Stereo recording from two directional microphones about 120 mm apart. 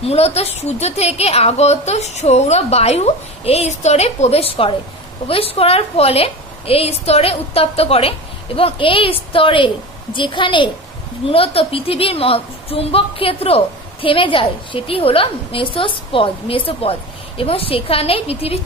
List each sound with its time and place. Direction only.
0.0 s a woman's voice: 60° left (ahead or behind)